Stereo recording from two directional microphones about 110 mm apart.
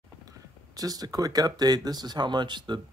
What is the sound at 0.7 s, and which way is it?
Speech, 35° right (ahead or behind).